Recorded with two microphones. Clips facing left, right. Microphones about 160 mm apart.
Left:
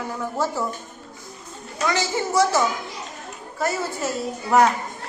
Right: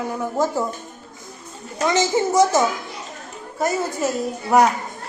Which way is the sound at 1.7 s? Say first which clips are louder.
Right 5 dB; 20° right (ahead or behind).